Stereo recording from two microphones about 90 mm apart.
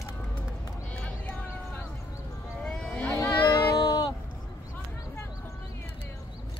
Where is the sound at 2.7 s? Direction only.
10° left (ahead or behind).